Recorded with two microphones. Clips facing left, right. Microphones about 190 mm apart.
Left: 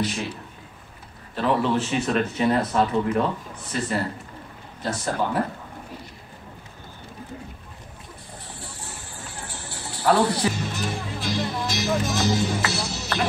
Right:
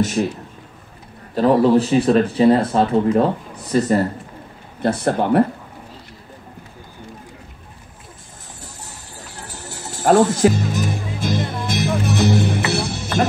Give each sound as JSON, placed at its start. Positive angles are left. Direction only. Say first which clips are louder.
{"t": 0.0, "sound": "a man's voice", "louder": "right 8 dB", "side_deg": -45}
{"t": 1.3, "sound": "speech", "louder": "right 9 dB", "side_deg": -40}
{"t": 4.8, "sound": "speech", "louder": "right 8 dB", "side_deg": -60}
{"t": 8.5, "sound": "music", "louder": "even", "side_deg": -40}